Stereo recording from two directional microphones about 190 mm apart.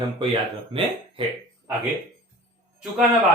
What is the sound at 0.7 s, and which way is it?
Speech, 25° right (ahead or behind).